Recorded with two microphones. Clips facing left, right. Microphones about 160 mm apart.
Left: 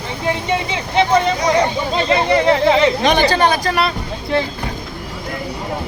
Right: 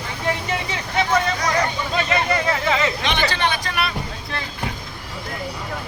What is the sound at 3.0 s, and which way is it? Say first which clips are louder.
Speech: left 8 dB; 40° left (ahead or behind).